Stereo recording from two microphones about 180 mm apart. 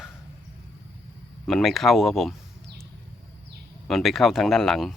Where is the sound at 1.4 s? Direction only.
Centre (ahead or behind).